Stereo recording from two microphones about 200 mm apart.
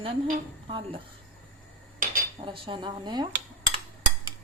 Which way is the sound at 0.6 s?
25° right (ahead or behind).